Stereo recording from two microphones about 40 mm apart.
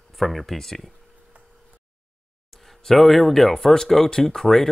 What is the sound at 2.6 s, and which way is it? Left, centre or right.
Speech, centre.